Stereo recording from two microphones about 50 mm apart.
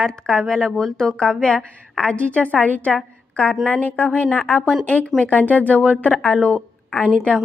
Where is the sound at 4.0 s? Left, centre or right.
Left.